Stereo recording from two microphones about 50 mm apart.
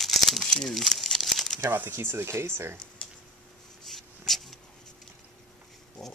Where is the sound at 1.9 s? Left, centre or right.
Right.